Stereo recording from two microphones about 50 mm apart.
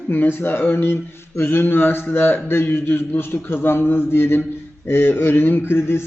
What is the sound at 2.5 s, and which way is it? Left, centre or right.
A man's voice, left.